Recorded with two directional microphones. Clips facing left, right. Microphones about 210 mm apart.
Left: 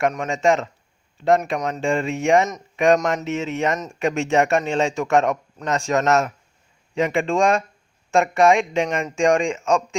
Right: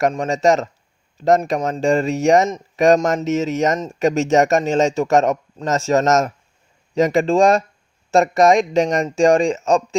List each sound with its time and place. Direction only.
0.0 s speech: 35° right (ahead or behind)